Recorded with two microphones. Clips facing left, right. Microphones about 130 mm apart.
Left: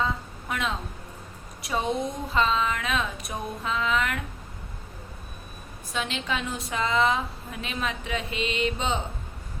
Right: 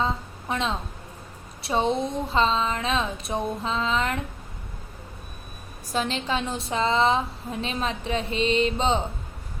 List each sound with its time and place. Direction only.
0.0 s a woman's voice: 30° right (ahead or behind)
1.6 s a sound: 30° right (ahead or behind)
5.9 s a woman's voice: 35° right (ahead or behind)